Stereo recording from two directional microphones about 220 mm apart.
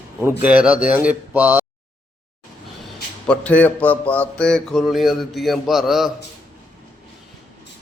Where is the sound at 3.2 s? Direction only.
5° left (ahead or behind).